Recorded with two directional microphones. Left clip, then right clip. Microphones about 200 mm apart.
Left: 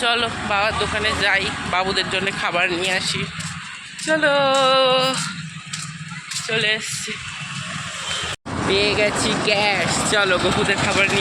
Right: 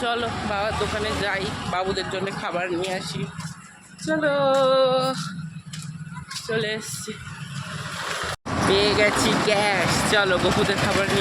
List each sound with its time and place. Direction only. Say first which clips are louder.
0.0 s speech: left 5 dB; centre (ahead or behind)
6.5 s speech: left 6 dB; 15° right (ahead or behind)
8.7 s speech: left 1 dB; 5° right (ahead or behind)